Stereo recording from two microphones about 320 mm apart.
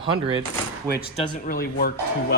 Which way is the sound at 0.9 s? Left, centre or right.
Left.